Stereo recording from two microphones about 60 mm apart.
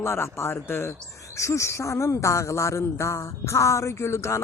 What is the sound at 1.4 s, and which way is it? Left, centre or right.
Speech, left.